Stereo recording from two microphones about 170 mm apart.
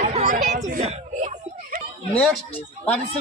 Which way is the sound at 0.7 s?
45° right (ahead or behind).